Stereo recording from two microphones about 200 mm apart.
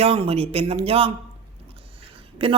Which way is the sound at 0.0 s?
30° right (ahead or behind).